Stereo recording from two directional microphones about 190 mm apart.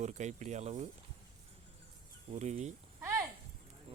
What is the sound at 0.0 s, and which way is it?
Speech, 35° right (ahead or behind).